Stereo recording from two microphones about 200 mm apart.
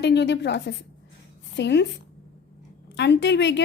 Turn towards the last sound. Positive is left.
turn(degrees=60)  # may be behind; listen again after turning